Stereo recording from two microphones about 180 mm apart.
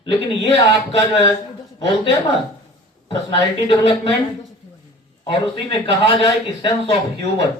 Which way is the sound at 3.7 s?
30° left (ahead or behind).